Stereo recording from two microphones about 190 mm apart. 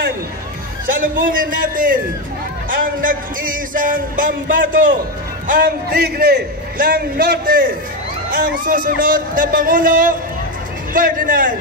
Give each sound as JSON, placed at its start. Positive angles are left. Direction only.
{"t": 0.8, "sound": "a man's voice", "side_deg": -45}